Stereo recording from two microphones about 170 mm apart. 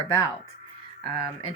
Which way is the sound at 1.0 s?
30° left (ahead or behind).